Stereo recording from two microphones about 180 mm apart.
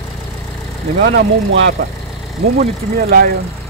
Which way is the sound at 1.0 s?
85° right.